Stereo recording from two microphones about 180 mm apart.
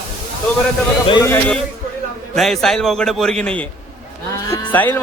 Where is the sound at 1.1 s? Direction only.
15° left (ahead or behind).